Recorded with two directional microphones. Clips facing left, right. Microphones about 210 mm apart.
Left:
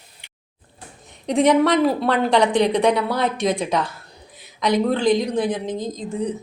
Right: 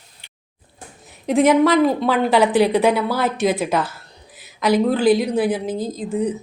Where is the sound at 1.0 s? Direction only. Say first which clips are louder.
Right 2 dB; 5° right (ahead or behind).